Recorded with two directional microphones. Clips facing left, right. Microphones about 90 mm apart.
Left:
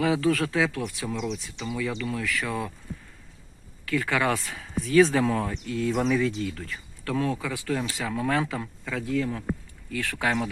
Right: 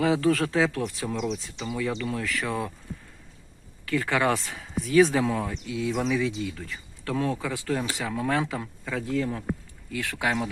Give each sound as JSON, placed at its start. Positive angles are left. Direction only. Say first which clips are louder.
{"t": 0.0, "sound": "speech", "louder": "right 1 dB", "side_deg": -30}
{"t": 3.8, "sound": "speech", "louder": "right 1 dB", "side_deg": -25}
{"t": 7.0, "sound": "speech", "louder": "even", "side_deg": -25}